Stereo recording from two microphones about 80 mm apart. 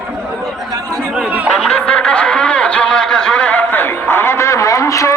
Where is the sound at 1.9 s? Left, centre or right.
Centre.